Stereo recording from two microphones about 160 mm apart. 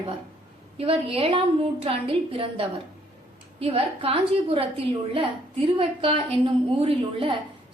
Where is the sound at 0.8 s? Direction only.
35° right (ahead or behind).